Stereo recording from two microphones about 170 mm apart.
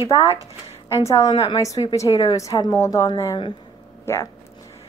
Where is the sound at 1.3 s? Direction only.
35° left (ahead or behind).